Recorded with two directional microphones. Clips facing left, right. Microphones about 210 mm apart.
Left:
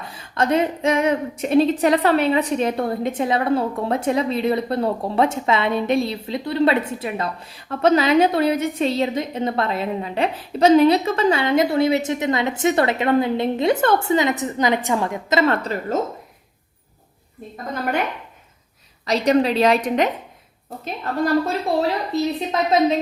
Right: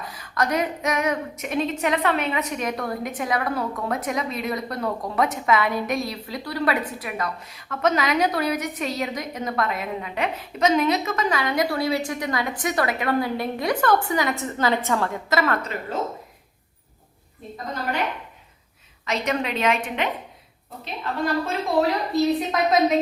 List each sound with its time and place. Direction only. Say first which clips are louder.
0.0 s a woman's voice: left 3 dB; 25° left (ahead or behind)
15.9 s speech: left 4 dB; 45° left (ahead or behind)
19.0 s a woman's voice: left 8 dB; 35° left (ahead or behind)